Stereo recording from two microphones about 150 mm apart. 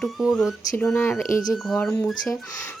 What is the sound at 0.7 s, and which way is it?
Speech, 15° left (ahead or behind).